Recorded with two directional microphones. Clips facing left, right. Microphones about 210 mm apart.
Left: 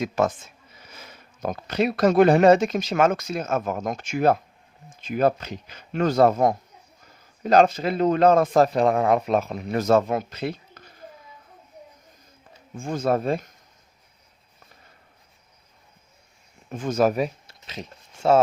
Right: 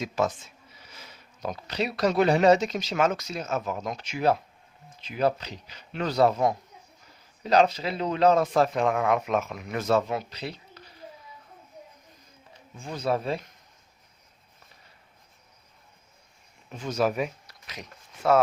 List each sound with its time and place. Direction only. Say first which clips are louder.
0.0 s speech: left 4 dB; 50° left (ahead or behind)
12.7 s speech: left 5 dB; 50° left (ahead or behind)
16.6 s speech: left 5 dB; 50° left (ahead or behind); by 18.3 s 25° left (ahead or behind)